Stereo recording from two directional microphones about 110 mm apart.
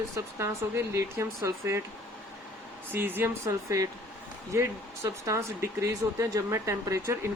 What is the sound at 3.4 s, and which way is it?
Speech, 30° right (ahead or behind).